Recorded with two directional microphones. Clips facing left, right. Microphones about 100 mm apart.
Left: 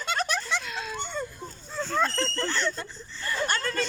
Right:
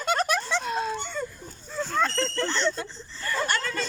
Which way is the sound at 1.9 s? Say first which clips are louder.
Right 1 dB; 5° left (ahead or behind).